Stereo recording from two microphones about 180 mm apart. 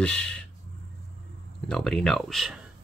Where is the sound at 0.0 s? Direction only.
5° left (ahead or behind).